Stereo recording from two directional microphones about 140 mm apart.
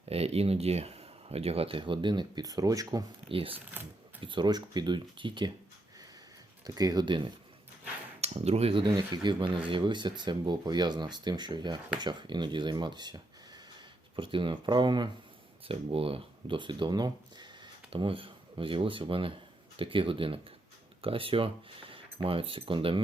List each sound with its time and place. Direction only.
0.1 s speech: 45° right (ahead or behind); by 3.0 s 25° right (ahead or behind)
3.2 s speech: 40° right (ahead or behind)
6.7 s speech: 25° right (ahead or behind)
8.2 s speech: 50° right (ahead or behind); by 15.1 s 35° right (ahead or behind)
15.6 s speech: 45° right (ahead or behind)